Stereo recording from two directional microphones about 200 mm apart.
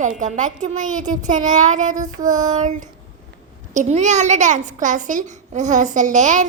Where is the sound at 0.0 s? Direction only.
40° right (ahead or behind).